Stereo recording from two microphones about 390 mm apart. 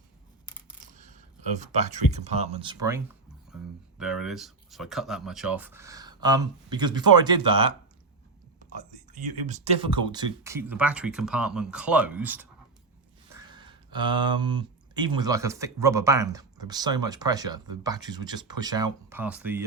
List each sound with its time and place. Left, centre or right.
0.9 s speech: centre
9.1 s speech: centre